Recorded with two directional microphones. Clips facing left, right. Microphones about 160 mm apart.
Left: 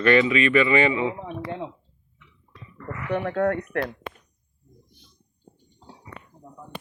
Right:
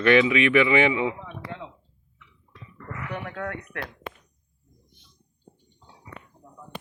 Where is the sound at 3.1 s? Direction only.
40° left (ahead or behind).